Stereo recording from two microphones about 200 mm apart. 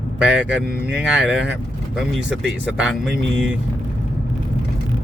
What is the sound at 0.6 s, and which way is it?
Speech, 50° right (ahead or behind).